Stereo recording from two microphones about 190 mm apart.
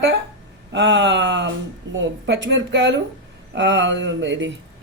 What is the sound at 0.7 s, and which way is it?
A man's voice, 70° right (ahead or behind).